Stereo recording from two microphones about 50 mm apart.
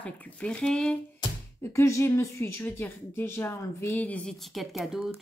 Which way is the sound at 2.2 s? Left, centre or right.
Left.